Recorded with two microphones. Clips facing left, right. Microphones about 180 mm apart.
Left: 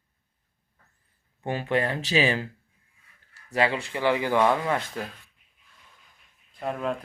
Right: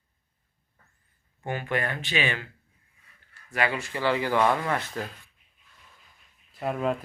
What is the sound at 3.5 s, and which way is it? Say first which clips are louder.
Speech: left 3 dB; 25° left (ahead or behind).